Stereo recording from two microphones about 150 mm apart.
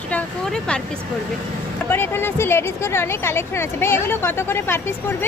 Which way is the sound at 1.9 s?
15° left (ahead or behind).